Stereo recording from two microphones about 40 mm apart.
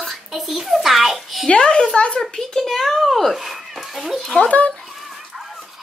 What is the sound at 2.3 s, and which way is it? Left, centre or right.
Speech, centre.